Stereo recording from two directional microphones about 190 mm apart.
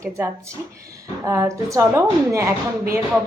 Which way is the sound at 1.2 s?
15° right (ahead or behind).